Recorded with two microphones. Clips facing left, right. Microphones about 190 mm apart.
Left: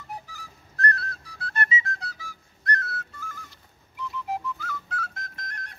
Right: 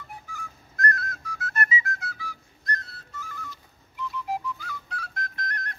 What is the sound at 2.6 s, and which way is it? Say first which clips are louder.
Whistle: left 5 dB; 70° left (ahead or behind).